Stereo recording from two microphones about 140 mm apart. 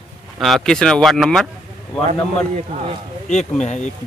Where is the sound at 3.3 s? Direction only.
55° left (ahead or behind).